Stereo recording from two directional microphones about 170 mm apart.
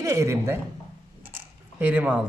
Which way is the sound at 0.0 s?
15° right (ahead or behind).